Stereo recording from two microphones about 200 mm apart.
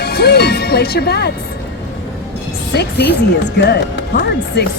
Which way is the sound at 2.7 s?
55° left (ahead or behind).